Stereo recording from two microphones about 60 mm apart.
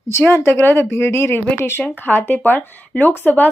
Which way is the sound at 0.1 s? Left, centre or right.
Left.